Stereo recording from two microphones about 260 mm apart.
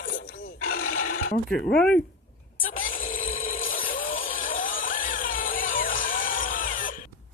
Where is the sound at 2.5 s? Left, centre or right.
Left.